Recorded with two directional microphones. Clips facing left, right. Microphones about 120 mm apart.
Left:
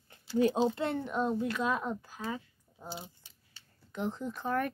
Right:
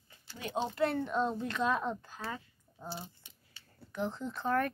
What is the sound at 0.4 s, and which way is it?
Speech, 40° left (ahead or behind).